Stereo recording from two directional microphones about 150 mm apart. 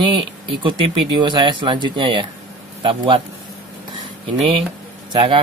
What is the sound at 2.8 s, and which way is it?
Speech, 35° right (ahead or behind).